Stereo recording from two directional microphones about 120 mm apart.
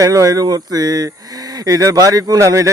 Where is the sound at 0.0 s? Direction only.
25° right (ahead or behind).